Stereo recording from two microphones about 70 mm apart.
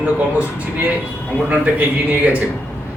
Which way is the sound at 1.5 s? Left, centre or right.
Right.